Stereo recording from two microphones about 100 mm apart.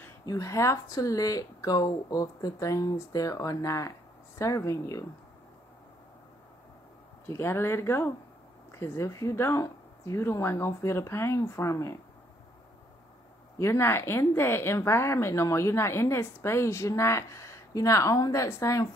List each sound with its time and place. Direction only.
0.2 s speech: 35° left (ahead or behind)
7.2 s speech: 25° left (ahead or behind)
13.6 s speech: 25° left (ahead or behind)